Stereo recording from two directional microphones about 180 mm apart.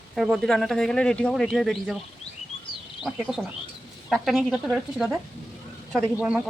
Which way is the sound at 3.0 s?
Centre (ahead or behind).